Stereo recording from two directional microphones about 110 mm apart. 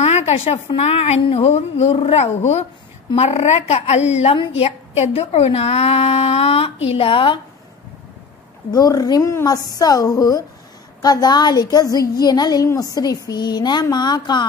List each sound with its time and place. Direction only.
0.0 s a sound: 70° left (ahead or behind)
0.7 s a woman's voice: 70° left (ahead or behind); by 7.3 s 50° left (ahead or behind)
8.7 s a woman's voice: 35° left (ahead or behind)